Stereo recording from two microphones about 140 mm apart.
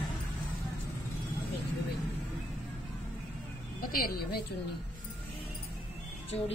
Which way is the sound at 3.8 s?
90° left.